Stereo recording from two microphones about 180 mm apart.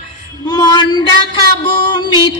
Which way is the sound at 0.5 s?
20° left (ahead or behind).